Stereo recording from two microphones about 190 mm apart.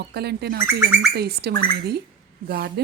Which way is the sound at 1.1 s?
55° right (ahead or behind).